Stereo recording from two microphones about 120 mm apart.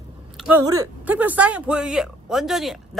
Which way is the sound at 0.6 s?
30° right (ahead or behind).